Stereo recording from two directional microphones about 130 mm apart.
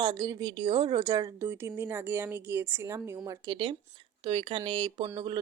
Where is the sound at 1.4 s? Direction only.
20° right (ahead or behind).